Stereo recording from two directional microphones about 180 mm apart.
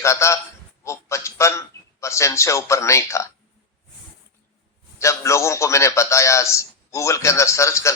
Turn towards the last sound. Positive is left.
turn(degrees=15)  # may be behind; listen again after turning